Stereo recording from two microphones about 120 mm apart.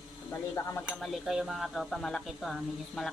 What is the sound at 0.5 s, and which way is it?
Cutlery, 25° left (ahead or behind).